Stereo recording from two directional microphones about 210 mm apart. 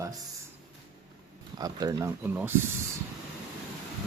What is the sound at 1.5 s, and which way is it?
Speech, 20° right (ahead or behind).